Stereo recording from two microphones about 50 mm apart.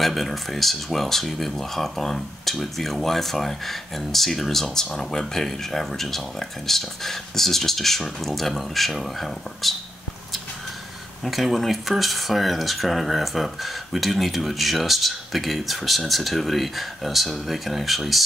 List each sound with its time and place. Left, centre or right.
0.0 s speech: centre
11.2 s speech: centre